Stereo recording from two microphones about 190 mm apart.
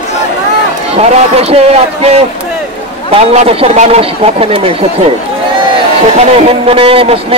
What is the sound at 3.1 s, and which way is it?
Speech, 30° right (ahead or behind).